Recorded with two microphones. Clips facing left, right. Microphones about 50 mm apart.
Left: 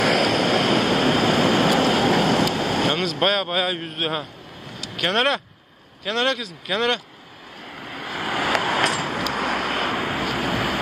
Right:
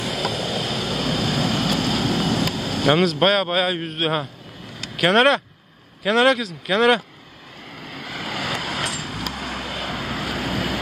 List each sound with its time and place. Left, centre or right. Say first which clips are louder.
0.0 s vehicle: left 7 dB; left
2.1 s vehicle: left 3 dB; left
3.0 s a man's voice: right 3 dB; centre
7.8 s vehicle: left 2 dB; centre
8.2 s vehicle: left 4 dB; left
8.6 s vehicle: left 6 dB; left
9.3 s vehicle: left 6 dB; left
9.8 s vehicle: left 4 dB; left